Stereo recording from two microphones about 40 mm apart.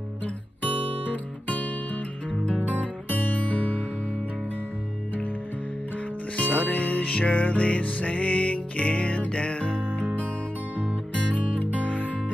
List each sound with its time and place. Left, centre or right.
2.6 s music: left
6.3 s music: left
11.3 s music: left